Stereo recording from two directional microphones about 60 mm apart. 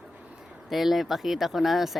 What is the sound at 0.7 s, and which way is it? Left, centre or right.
Speech, centre.